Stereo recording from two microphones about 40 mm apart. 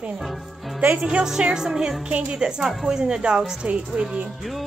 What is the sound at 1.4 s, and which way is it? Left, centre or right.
Music, centre.